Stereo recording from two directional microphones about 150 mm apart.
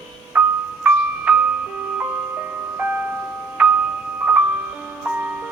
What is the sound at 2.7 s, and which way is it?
Music, 10° right (ahead or behind).